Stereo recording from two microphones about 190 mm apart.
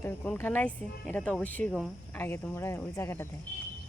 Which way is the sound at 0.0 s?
10° left (ahead or behind).